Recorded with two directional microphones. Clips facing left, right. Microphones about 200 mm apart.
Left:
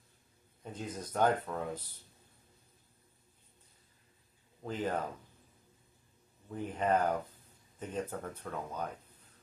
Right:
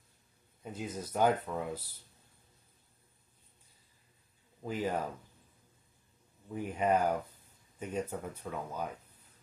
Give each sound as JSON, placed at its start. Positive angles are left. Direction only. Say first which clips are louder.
{"t": 0.6, "sound": "speech", "louder": "right 2 dB", "side_deg": -10}
{"t": 4.6, "sound": "speech", "louder": "right 1 dB", "side_deg": -10}
{"t": 6.5, "sound": "speech", "louder": "right 1 dB", "side_deg": -10}